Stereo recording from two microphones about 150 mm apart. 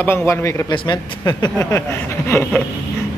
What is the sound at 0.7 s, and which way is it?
Speech, 30° left (ahead or behind).